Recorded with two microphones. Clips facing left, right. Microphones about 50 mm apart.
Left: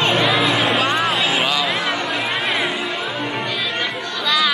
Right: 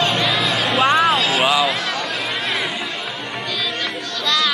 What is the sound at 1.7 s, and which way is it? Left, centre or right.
Chatter, centre.